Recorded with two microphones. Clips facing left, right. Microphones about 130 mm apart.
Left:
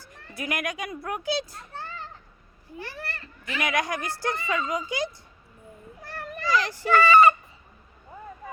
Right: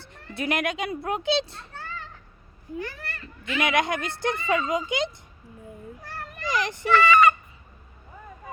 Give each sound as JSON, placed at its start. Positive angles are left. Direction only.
{"t": 0.0, "sound": "speech", "side_deg": -25}
{"t": 2.7, "sound": "a child's voice", "side_deg": 30}
{"t": 3.6, "sound": "speech", "side_deg": -25}
{"t": 6.4, "sound": "speech", "side_deg": -20}
{"t": 6.9, "sound": "fowl", "side_deg": 35}